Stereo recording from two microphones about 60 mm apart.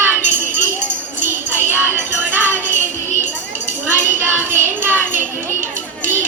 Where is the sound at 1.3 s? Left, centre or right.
Right.